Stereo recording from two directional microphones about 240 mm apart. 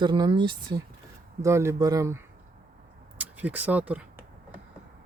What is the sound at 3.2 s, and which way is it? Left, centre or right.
Speech, centre.